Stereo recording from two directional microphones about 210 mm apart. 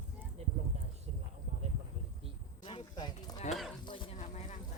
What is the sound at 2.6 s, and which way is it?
Clip-clop, 20° left (ahead or behind).